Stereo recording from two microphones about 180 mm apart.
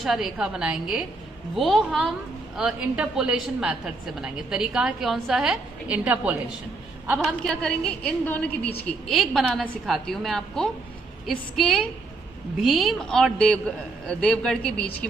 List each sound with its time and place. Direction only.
0.0 s a woman's voice: centre (ahead or behind)